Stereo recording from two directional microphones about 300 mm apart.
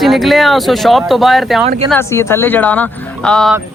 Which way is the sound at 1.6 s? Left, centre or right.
Centre.